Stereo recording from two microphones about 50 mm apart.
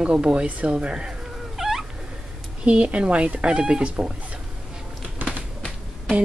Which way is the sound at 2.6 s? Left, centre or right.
Right.